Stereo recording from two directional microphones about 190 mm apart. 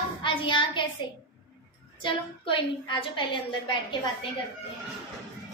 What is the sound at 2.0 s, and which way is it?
A woman's voice, 25° left (ahead or behind).